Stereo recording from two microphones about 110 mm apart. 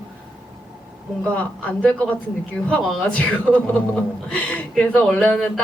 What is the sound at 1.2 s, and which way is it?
A man's voice, 10° left (ahead or behind).